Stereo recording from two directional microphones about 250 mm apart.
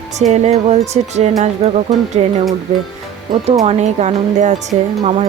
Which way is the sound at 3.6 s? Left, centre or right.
Right.